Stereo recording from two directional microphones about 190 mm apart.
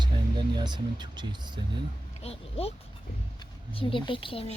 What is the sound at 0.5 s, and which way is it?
Speech, 25° right (ahead or behind).